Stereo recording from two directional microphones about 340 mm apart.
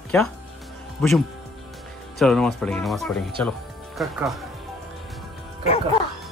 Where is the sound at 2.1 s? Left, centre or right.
Centre.